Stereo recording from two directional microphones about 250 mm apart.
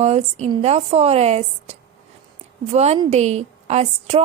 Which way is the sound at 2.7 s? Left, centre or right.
Right.